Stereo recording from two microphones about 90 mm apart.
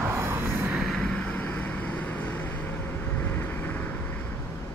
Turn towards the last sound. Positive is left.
turn(degrees=20)  # may be behind; listen again after turning